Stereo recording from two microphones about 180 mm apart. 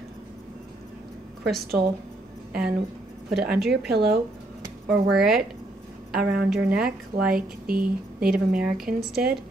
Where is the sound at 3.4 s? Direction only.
60° right (ahead or behind).